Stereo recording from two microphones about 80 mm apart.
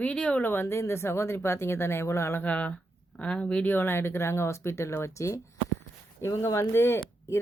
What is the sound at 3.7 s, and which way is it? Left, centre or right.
Speech, left.